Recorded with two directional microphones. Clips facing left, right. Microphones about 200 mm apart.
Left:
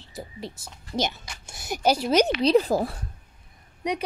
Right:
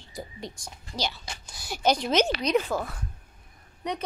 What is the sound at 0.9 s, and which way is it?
Speech, 20° left (ahead or behind).